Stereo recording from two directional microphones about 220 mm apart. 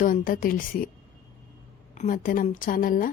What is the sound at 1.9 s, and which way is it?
Speech, 35° left (ahead or behind).